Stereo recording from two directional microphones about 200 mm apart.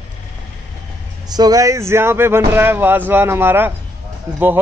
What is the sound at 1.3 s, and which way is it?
Speech, 20° right (ahead or behind).